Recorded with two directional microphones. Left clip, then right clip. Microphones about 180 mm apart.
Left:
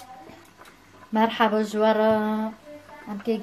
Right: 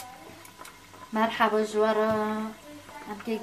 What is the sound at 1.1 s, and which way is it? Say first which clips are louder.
Speech: left 3 dB; 50° left (ahead or behind).